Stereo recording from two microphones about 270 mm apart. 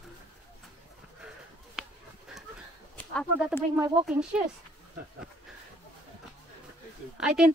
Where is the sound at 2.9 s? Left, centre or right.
Centre.